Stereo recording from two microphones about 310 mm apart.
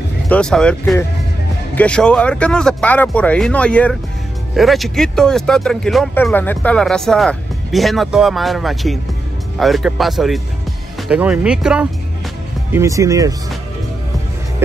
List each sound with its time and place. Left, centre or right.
0.3 s speech: centre